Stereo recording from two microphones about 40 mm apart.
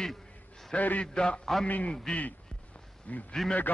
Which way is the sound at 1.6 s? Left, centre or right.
Left.